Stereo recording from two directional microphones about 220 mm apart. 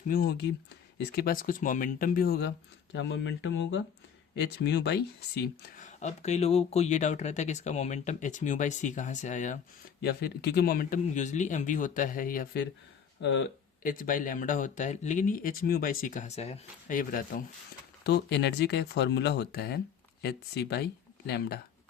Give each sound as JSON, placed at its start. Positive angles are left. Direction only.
{"t": 0.1, "sound": "speech", "side_deg": 45}
{"t": 2.9, "sound": "speech", "side_deg": 55}
{"t": 10.0, "sound": "speech", "side_deg": 45}
{"t": 13.2, "sound": "speech", "side_deg": 55}
{"t": 13.8, "sound": "speech", "side_deg": 35}
{"t": 18.0, "sound": "speech", "side_deg": 50}